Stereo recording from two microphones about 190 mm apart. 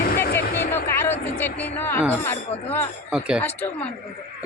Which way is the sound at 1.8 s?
10° left (ahead or behind).